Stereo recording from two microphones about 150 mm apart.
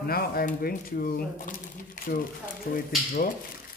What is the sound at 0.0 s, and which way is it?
Speech, 85° left.